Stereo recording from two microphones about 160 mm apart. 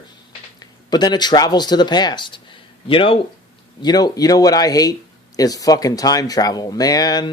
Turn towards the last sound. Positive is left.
turn(degrees=25)  # may be behind; listen again after turning